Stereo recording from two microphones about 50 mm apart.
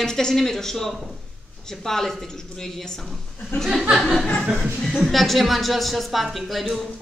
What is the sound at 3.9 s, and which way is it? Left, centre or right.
A woman's voice, centre.